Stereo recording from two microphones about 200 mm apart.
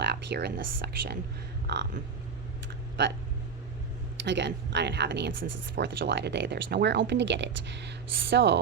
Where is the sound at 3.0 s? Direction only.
60° right (ahead or behind).